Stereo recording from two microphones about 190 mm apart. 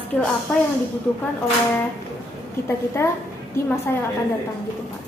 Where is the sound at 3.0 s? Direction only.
10° left (ahead or behind).